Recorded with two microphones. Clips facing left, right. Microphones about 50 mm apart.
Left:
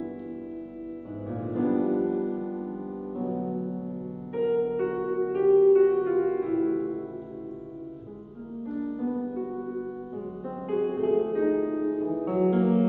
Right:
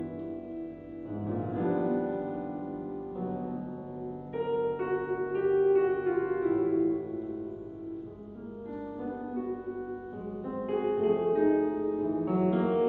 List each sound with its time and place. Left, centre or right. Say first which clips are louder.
1.1 s music: left 1 dB; centre
5.0 s music: left 4 dB; centre
5.7 s music: left 5 dB; centre
8.7 s music: left 8 dB; centre